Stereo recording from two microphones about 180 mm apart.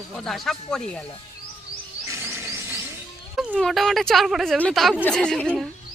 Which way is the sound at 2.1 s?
15° right (ahead or behind).